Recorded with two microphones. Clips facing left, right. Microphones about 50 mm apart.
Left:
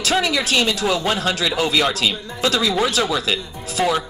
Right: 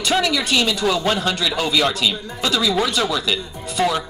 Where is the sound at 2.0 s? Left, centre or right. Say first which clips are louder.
Left 1 dB; centre.